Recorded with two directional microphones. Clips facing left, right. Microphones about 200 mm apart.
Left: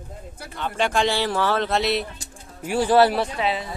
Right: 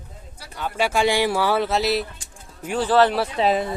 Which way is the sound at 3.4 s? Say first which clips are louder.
Right 5 dB; 45° right (ahead or behind).